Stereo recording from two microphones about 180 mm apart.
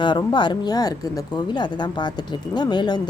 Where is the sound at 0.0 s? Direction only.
25° left (ahead or behind).